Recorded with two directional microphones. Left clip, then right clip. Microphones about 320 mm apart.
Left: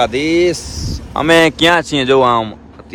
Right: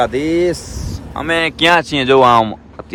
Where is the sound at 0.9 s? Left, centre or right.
Left.